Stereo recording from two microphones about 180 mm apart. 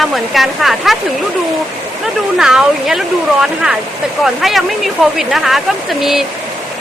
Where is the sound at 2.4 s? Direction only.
5° right (ahead or behind).